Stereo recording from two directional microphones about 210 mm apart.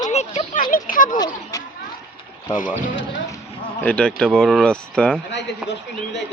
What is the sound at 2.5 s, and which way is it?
Speech, 40° left (ahead or behind).